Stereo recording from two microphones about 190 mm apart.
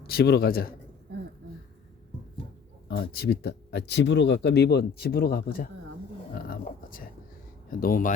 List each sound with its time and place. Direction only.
0.1 s a man's voice: 55° left (ahead or behind)
2.9 s speech: 55° left (ahead or behind)
7.7 s a man's voice: 50° left (ahead or behind)